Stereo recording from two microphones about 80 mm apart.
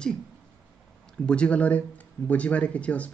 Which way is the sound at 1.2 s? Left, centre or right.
Centre.